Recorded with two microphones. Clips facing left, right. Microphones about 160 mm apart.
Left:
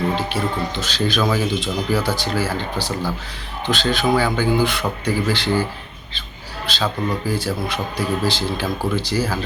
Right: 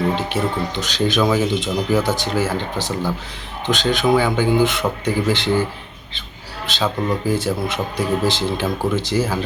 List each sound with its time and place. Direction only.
0.2 s speech: 20° right (ahead or behind)
6.7 s speech: 20° right (ahead or behind)